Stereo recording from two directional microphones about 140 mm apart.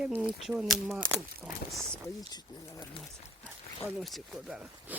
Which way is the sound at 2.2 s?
30° left (ahead or behind).